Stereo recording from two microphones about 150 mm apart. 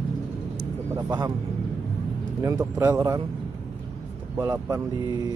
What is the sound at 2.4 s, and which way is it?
Speech, 20° right (ahead or behind).